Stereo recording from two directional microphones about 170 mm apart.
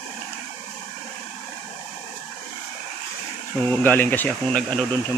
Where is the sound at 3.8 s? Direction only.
10° left (ahead or behind).